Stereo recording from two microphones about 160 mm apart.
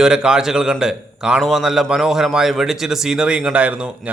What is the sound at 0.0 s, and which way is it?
A man's voice, 5° right (ahead or behind).